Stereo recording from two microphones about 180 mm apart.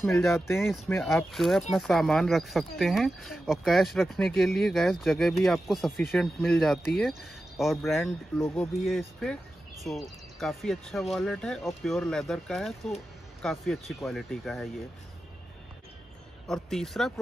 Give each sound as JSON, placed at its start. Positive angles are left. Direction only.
{"t": 0.3, "sound": "speech", "side_deg": 15}
{"t": 1.0, "sound": "speech", "side_deg": 0}
{"t": 16.7, "sound": "speech", "side_deg": 0}